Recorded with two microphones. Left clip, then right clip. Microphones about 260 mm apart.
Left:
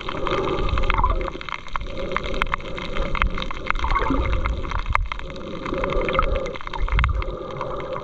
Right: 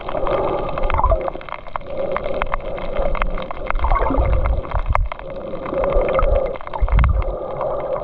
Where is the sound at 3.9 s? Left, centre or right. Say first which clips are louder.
Right 6 dB; centre.